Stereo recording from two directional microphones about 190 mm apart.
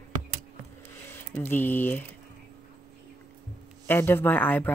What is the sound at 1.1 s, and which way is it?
Speech, 10° left (ahead or behind).